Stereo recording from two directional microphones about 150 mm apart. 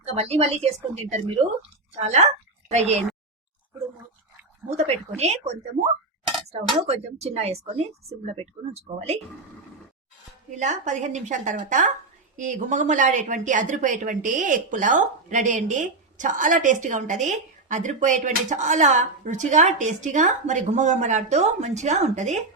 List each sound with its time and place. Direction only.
0.0 s a woman's voice: 45° right (ahead or behind)
4.9 s a woman's voice: 45° right (ahead or behind)
6.8 s a woman's voice: 45° right (ahead or behind)
10.6 s a woman's voice: 55° right (ahead or behind)